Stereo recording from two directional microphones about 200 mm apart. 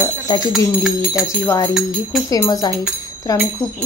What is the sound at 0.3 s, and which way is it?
Speech, 20° left (ahead or behind).